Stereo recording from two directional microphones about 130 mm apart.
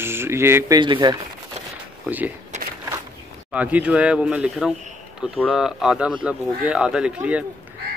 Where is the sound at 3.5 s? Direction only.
10° right (ahead or behind).